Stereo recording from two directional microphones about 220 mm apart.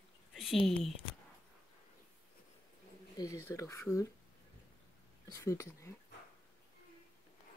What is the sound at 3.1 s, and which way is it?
Speech, 15° left (ahead or behind).